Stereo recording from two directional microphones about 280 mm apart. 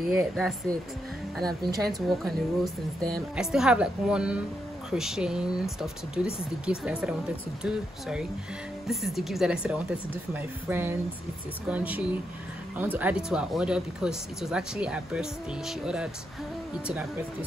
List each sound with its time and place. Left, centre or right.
0.0 s speech: centre
1.9 s speech: centre